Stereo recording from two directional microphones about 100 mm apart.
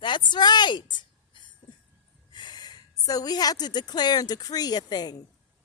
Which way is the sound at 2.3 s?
50° left (ahead or behind).